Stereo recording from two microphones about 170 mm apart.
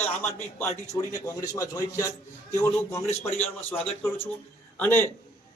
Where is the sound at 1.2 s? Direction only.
20° left (ahead or behind).